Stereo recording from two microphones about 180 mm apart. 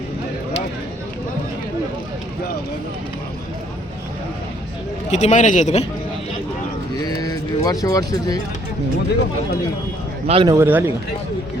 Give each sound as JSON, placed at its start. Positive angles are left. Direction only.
{"t": 5.1, "sound": "a man's voice", "side_deg": 40}
{"t": 7.0, "sound": "a sound", "side_deg": 20}
{"t": 10.2, "sound": "speech", "side_deg": -30}
{"t": 10.5, "sound": "a man's voice", "side_deg": -10}